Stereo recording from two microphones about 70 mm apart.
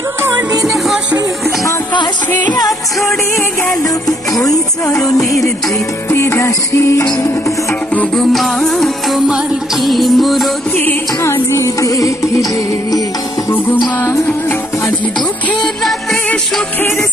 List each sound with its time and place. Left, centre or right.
4.4 s music: left
6.0 s music: left
8.2 s music: centre
11.2 s music: left